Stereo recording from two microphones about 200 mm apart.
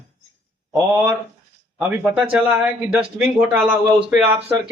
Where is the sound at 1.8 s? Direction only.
5° right (ahead or behind).